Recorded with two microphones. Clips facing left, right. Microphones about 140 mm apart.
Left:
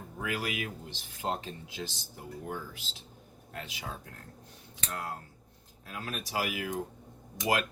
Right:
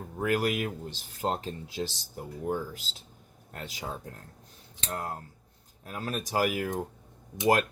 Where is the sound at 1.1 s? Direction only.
40° right (ahead or behind).